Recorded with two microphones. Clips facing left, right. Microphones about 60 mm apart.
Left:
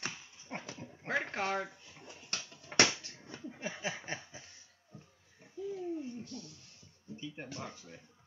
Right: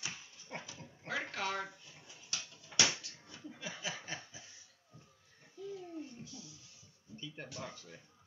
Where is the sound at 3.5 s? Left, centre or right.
Left.